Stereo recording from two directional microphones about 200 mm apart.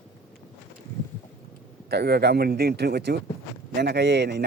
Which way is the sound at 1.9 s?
55° right (ahead or behind).